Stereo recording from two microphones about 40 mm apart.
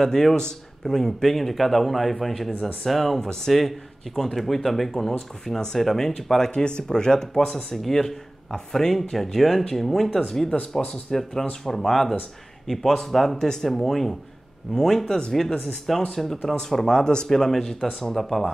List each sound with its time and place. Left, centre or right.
0.0 s a man's voice: centre
10.5 s speech: left
10.9 s a man's voice: centre
17.3 s speech: centre